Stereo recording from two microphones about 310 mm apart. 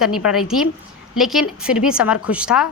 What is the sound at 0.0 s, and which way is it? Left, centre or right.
A woman's voice, centre.